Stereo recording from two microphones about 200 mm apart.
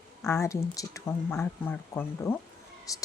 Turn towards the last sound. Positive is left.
turn(degrees=15)  # may be behind; listen again after turning